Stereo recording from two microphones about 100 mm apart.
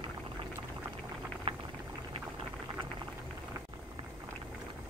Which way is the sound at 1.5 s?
80° right.